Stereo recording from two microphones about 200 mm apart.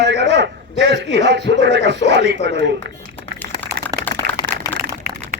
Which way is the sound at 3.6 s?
10° left (ahead or behind).